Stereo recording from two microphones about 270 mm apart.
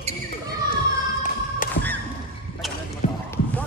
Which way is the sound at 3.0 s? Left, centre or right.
Left.